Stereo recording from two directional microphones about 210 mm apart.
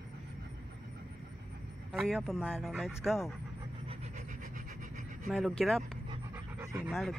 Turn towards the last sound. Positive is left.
turn(degrees=-5)  # may be behind; listen again after turning